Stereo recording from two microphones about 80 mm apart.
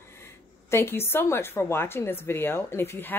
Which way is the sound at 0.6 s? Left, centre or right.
Left.